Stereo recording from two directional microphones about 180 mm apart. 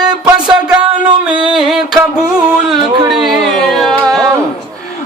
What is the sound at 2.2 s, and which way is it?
Music, 5° right (ahead or behind).